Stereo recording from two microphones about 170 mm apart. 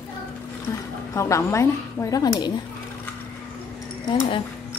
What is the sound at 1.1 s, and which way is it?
A woman's voice, 15° left (ahead or behind).